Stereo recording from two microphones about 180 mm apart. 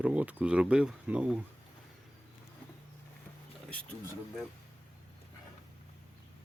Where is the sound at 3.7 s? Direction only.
5° left (ahead or behind).